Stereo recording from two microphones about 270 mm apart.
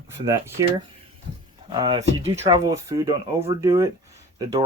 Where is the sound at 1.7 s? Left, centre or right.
Centre.